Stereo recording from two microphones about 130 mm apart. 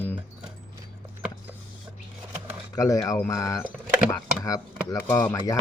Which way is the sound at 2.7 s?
25° left (ahead or behind).